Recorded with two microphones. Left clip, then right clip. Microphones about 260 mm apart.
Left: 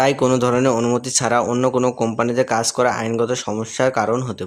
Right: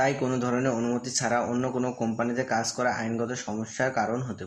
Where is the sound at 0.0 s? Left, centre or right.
Left.